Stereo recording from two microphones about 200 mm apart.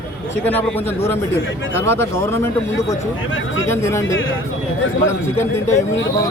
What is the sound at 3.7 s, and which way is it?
Speech, 15° left (ahead or behind).